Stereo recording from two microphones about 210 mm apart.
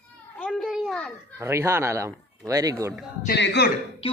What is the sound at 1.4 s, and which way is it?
Speech, 15° right (ahead or behind).